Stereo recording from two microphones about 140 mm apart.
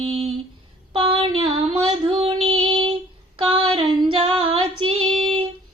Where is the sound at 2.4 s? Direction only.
40° right (ahead or behind).